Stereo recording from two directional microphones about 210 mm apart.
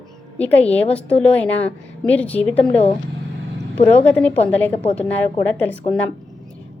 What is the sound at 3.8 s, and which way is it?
Speech, 30° left (ahead or behind).